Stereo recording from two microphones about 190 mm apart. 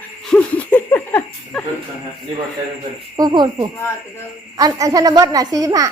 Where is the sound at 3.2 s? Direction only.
20° right (ahead or behind).